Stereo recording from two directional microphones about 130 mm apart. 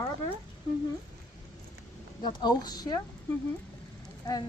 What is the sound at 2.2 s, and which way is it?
Speech, 35° left (ahead or behind).